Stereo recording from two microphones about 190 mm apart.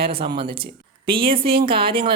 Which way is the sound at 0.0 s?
30° right (ahead or behind).